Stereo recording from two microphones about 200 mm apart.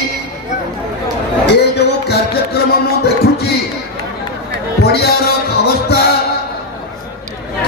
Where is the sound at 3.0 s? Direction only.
55° left (ahead or behind).